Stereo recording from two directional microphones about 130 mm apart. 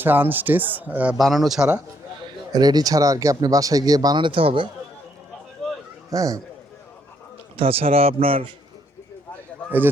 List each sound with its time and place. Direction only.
0.0 s speech: 15° right (ahead or behind)
1.2 s speech: centre (ahead or behind)
2.5 s speech: 30° right (ahead or behind)
6.1 s speech: 25° right (ahead or behind)
7.5 s a man's voice: 45° right (ahead or behind)